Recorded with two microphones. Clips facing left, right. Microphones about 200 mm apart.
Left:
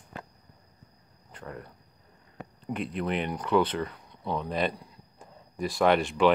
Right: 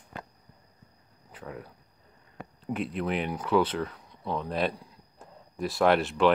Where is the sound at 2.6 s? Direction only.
5° right (ahead or behind).